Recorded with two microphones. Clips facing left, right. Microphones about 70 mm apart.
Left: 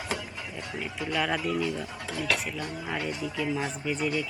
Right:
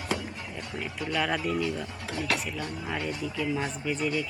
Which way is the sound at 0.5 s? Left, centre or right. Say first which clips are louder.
Left 2 dB; centre.